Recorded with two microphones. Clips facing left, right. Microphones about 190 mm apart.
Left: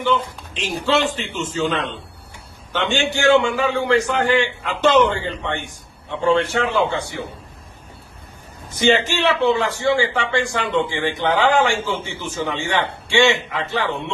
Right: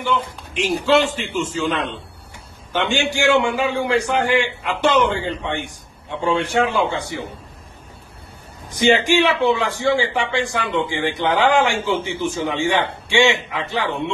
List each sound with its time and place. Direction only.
0.6 s a man's voice: 10° right (ahead or behind)
8.7 s a man's voice: 15° right (ahead or behind)